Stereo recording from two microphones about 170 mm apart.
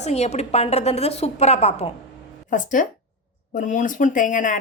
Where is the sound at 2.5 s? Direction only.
50° left (ahead or behind).